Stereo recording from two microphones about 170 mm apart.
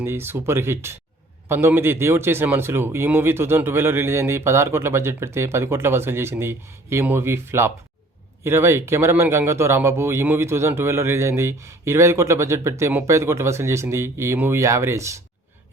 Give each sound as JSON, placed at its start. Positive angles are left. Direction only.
{"t": 0.0, "sound": "speech", "side_deg": -15}